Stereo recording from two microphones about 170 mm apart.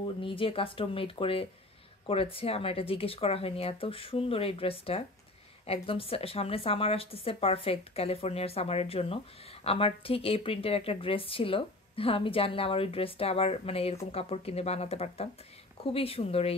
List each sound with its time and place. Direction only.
0.0 s a woman's voice: 30° left (ahead or behind)